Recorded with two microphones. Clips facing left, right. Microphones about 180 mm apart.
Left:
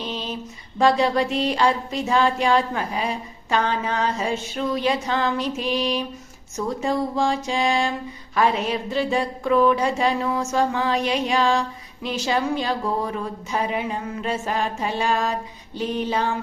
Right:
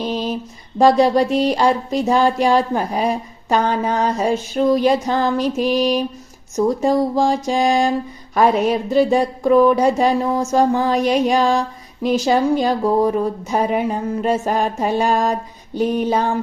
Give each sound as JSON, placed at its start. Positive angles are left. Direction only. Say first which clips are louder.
{"t": 0.0, "sound": "female singing", "louder": "right 8 dB", "side_deg": -45}
{"t": 0.8, "sound": "a sound", "louder": "right 6 dB", "side_deg": -40}
{"t": 8.4, "sound": "speech", "louder": "right 6 dB", "side_deg": -45}